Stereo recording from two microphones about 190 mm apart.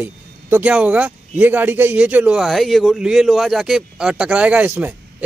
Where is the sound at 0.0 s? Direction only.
10° right (ahead or behind).